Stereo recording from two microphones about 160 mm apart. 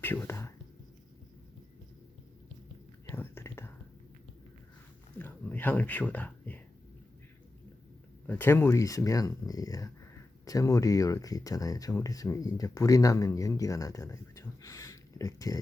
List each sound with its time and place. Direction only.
0.0 s whispering: 15° left (ahead or behind)
3.1 s whispering: 15° left (ahead or behind)
5.1 s a sound: 10° left (ahead or behind)
8.3 s speech: 15° left (ahead or behind)